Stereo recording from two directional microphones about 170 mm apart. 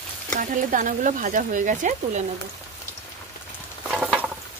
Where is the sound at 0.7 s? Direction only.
50° right (ahead or behind).